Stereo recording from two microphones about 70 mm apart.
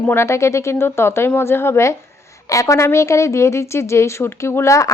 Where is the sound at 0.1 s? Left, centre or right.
Left.